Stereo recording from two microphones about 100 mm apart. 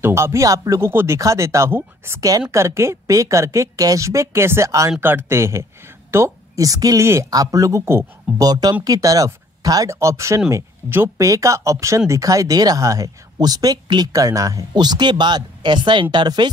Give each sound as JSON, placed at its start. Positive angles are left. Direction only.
{"t": 0.0, "sound": "a woman's voice", "side_deg": -30}
{"t": 8.4, "sound": "a woman's voice", "side_deg": -40}